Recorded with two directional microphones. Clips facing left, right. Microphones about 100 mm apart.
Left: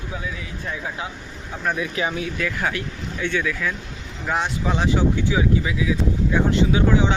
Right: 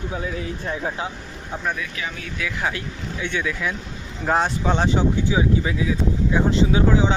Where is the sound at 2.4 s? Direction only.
Centre (ahead or behind).